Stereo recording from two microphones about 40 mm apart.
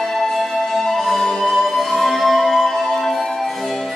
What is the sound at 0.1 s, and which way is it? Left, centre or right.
Music, centre.